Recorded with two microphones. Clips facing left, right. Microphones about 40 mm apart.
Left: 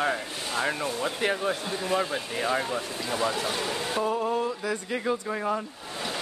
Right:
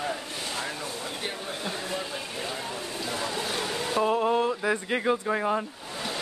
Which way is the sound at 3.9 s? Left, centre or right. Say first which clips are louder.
Right 4 dB; right.